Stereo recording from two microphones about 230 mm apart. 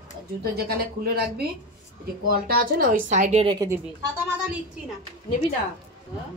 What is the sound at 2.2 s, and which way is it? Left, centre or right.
A woman's voice, right.